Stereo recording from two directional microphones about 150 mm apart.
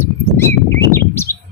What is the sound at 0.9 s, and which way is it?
Bird, 15° left (ahead or behind).